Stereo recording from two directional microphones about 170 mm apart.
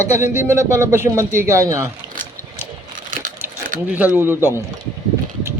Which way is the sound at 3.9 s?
10° right (ahead or behind).